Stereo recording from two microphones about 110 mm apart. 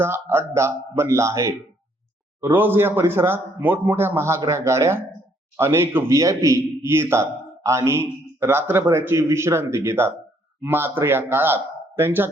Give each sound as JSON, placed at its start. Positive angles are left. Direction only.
{"t": 0.0, "sound": "a man's voice", "side_deg": -25}